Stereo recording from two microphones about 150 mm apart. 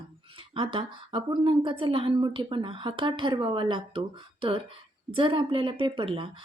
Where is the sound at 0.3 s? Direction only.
35° right (ahead or behind).